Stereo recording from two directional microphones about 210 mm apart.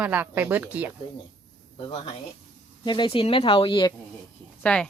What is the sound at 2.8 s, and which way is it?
Speech, 20° left (ahead or behind).